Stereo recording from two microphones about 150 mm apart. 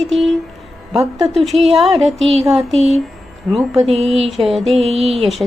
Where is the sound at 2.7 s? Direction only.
45° right (ahead or behind).